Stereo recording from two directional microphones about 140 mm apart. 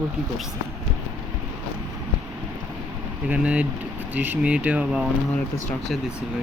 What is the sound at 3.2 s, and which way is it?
Speech, 10° right (ahead or behind).